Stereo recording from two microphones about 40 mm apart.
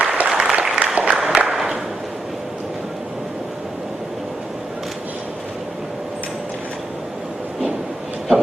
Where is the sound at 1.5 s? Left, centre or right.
Centre.